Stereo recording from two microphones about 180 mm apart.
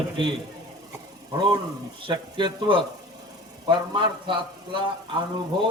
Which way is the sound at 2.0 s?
30° right (ahead or behind).